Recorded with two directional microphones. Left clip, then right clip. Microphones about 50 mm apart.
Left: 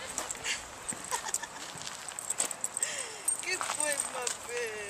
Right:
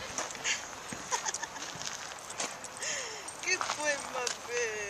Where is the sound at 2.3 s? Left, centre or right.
Right.